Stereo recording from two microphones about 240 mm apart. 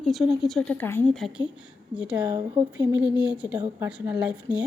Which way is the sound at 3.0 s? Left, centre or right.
Centre.